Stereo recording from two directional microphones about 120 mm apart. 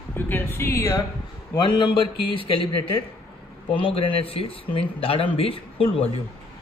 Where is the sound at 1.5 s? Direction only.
40° left (ahead or behind).